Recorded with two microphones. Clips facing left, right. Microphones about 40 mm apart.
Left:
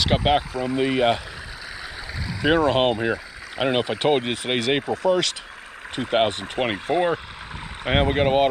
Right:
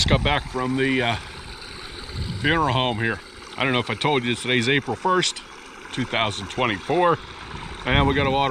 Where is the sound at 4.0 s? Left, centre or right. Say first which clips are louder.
Left 1 dB; centre.